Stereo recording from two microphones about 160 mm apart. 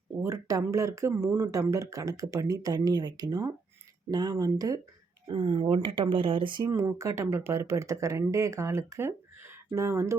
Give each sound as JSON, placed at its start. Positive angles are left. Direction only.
{"t": 0.2, "sound": "speech", "side_deg": -20}